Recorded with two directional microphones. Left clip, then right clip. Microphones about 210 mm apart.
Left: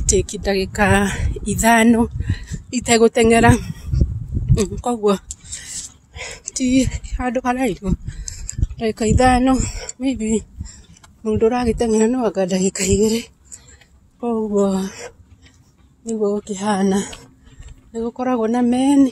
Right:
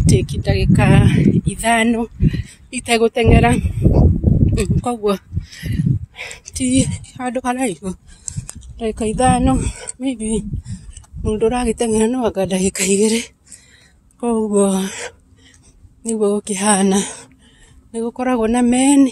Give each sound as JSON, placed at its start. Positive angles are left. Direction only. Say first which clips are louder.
{"t": 0.0, "sound": "speech", "louder": "left 1 dB", "side_deg": 15}
{"t": 14.2, "sound": "a woman's voice", "louder": "right 2 dB", "side_deg": -20}